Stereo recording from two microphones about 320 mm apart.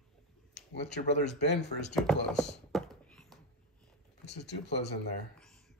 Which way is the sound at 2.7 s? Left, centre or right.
Centre.